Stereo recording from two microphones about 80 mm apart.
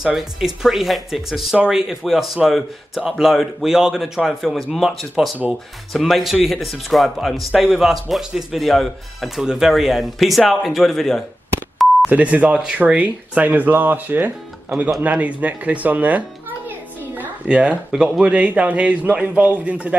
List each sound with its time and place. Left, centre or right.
0.0 s a man's voice: centre
12.1 s a child's voice: centre